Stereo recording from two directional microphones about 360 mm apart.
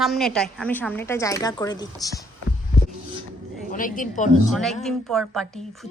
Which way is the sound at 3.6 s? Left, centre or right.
Left.